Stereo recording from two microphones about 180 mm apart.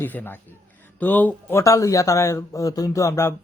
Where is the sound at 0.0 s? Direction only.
10° left (ahead or behind).